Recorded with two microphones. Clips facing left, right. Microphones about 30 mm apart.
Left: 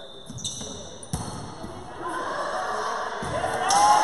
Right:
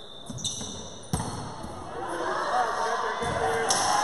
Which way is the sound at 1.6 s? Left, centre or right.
Centre.